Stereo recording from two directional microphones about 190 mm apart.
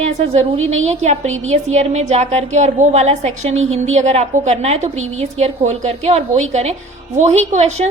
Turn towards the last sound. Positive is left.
turn(degrees=-35)  # may be behind; listen again after turning